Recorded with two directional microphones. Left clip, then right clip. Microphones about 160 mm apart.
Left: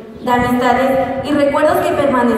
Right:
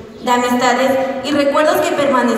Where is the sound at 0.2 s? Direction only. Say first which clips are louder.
Even; 20° right (ahead or behind).